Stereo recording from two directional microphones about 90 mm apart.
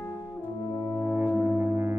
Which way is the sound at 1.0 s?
25° right (ahead or behind).